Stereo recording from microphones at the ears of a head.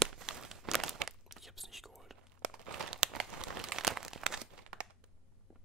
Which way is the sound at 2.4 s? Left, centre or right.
Right.